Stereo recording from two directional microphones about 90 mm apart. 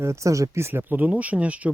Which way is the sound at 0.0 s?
35° right (ahead or behind).